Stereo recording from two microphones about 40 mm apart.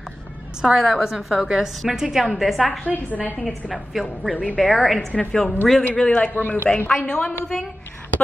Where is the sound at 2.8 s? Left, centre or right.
Left.